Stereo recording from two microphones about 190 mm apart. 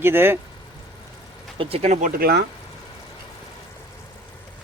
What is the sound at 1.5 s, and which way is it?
Speech, 30° right (ahead or behind).